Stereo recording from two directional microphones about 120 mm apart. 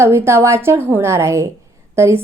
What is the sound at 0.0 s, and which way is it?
A woman's voice, 20° right (ahead or behind).